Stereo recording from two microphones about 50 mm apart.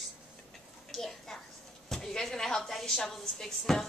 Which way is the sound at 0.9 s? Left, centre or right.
Centre.